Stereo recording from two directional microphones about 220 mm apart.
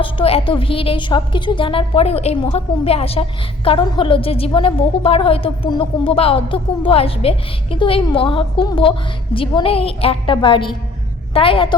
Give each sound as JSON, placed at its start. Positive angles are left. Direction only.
{"t": 0.0, "sound": "a woman's voice", "side_deg": 25}